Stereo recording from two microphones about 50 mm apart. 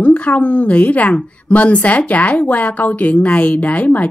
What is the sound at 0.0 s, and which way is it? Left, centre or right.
A woman's voice, left.